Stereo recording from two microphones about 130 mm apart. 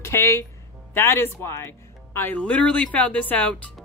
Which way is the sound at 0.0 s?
20° left (ahead or behind).